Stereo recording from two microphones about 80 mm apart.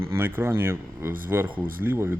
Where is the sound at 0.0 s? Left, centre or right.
Right.